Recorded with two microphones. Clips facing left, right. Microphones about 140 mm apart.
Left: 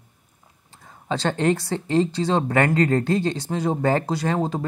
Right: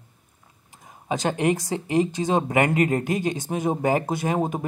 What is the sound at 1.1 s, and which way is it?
Speech, 15° right (ahead or behind).